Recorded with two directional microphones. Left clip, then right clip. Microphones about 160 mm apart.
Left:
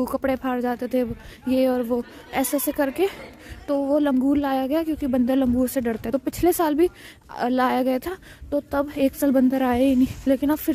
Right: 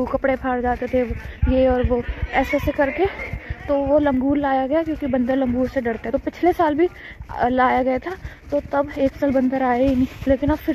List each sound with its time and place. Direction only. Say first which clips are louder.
0.0 s a woman's voice: right 3 dB; 40° left (ahead or behind)